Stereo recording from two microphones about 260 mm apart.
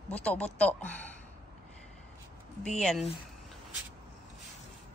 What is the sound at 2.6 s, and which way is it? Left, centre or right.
Speech, centre.